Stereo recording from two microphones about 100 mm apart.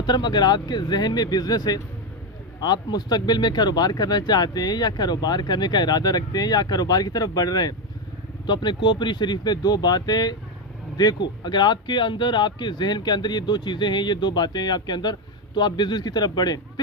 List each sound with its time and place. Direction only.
0.0 s speech: 45° left (ahead or behind)